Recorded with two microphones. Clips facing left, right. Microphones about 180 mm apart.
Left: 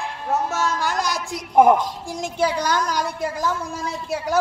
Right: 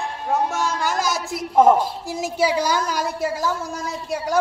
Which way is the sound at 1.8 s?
5° right (ahead or behind).